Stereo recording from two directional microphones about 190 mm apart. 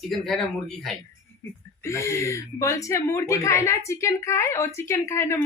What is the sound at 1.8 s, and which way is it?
A woman's voice, 15° left (ahead or behind).